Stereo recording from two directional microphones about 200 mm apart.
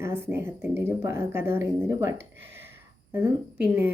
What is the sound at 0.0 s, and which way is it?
Speech, 10° right (ahead or behind).